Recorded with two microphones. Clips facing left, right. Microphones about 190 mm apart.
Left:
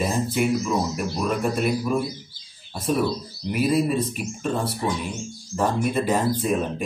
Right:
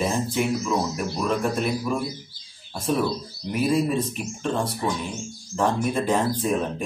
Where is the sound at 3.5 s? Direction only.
5° left (ahead or behind).